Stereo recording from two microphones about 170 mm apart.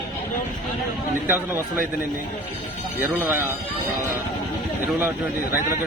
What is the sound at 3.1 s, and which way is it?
Speech, 15° right (ahead or behind).